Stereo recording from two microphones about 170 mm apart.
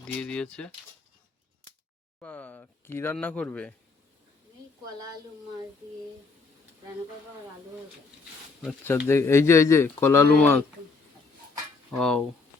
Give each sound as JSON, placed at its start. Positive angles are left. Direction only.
{"t": 0.0, "sound": "speech", "side_deg": 5}
{"t": 2.2, "sound": "speech", "side_deg": 10}
{"t": 4.9, "sound": "speech", "side_deg": -20}
{"t": 9.0, "sound": "speech", "side_deg": 15}
{"t": 11.9, "sound": "speech", "side_deg": 5}